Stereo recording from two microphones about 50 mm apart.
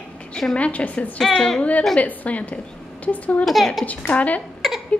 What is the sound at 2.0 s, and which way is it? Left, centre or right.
A woman's voice, left.